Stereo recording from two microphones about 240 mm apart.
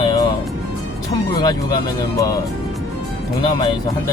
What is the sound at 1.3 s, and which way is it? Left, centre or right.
Speech, centre.